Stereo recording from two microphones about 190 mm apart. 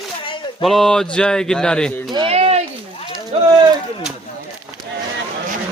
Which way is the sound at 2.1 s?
30° right (ahead or behind).